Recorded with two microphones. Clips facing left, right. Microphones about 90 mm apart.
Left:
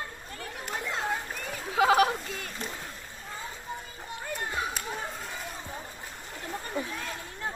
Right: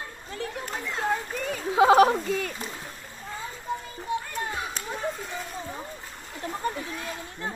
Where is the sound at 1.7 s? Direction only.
30° right (ahead or behind).